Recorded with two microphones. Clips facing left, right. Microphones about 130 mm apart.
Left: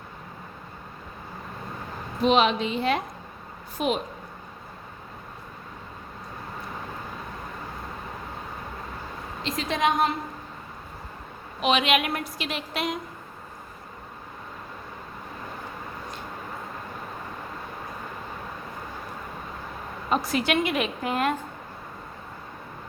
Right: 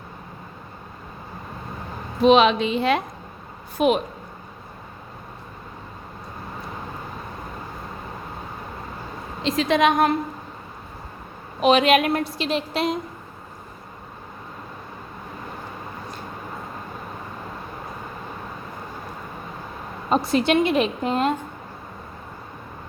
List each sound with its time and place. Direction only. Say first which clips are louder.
2.2 s a woman's voice: right 6 dB; 90° right
3.8 s a woman's voice: right 7 dB; 65° right (ahead or behind)
9.4 s a woman's voice: right 7 dB; 90° right
11.6 s a woman's voice: right 6 dB; 40° right (ahead or behind)
20.1 s a woman's voice: right 5 dB; 30° right (ahead or behind)